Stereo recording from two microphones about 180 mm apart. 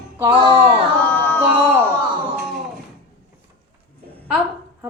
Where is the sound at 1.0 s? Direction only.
10° left (ahead or behind).